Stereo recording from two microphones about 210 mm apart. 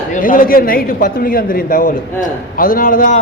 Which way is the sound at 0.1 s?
40° left (ahead or behind).